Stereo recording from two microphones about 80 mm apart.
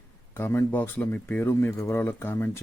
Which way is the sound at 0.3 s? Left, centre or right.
Left.